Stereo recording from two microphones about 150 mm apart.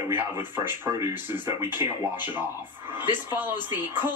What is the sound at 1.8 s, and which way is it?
Speech, 35° left (ahead or behind).